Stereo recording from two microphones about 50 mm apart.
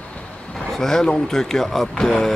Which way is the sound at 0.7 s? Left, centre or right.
Centre.